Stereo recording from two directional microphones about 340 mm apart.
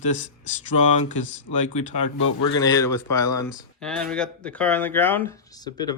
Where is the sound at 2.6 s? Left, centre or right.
Centre.